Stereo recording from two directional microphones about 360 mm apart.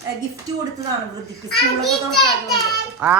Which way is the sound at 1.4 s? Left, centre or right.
Centre.